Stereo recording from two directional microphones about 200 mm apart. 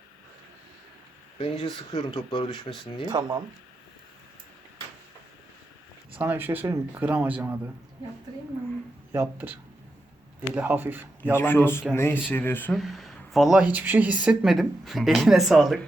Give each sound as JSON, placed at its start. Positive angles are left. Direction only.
{"t": 1.4, "sound": "speech", "side_deg": 25}
{"t": 3.1, "sound": "speech", "side_deg": -20}
{"t": 6.1, "sound": "speech", "side_deg": -10}
{"t": 9.1, "sound": "speech", "side_deg": -10}
{"t": 11.3, "sound": "speech", "side_deg": 10}